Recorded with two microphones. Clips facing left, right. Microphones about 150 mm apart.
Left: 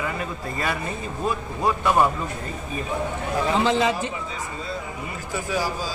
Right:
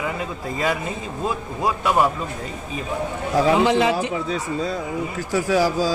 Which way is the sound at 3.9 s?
85° right.